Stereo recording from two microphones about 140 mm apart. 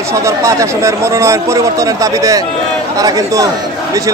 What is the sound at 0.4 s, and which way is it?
A man's voice, 20° right (ahead or behind).